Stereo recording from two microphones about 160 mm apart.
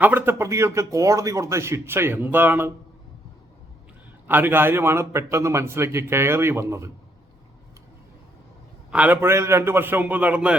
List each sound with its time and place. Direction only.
0.0 s speech: 10° right (ahead or behind)
4.3 s speech: 10° right (ahead or behind)
8.9 s speech: 10° right (ahead or behind)